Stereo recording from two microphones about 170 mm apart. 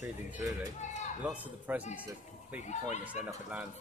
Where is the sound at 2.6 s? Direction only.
45° left (ahead or behind).